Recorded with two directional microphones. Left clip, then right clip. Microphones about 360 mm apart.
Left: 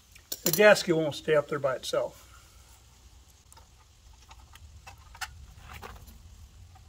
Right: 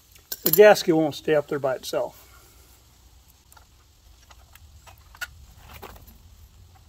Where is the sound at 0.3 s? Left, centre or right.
Centre.